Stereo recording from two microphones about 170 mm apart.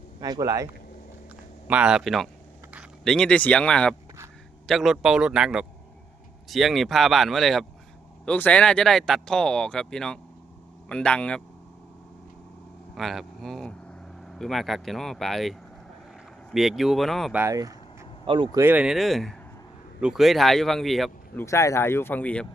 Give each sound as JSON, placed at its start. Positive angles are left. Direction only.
{"t": 0.2, "sound": "a man's voice", "side_deg": -20}
{"t": 1.6, "sound": "speech", "side_deg": -5}
{"t": 12.9, "sound": "vehicle", "side_deg": 0}
{"t": 14.3, "sound": "speech", "side_deg": 0}
{"t": 17.3, "sound": "a man's voice", "side_deg": -15}
{"t": 18.6, "sound": "speech", "side_deg": -10}
{"t": 21.3, "sound": "speech", "side_deg": 15}